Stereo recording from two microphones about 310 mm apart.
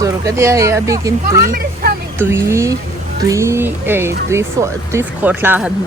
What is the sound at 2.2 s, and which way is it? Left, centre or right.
Speech, centre.